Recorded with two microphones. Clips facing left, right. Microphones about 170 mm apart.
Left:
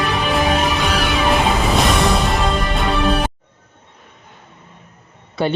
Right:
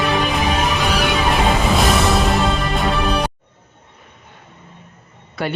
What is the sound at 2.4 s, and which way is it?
Music, centre (ahead or behind).